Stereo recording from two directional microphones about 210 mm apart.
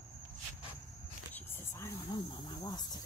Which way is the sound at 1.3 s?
15° left (ahead or behind).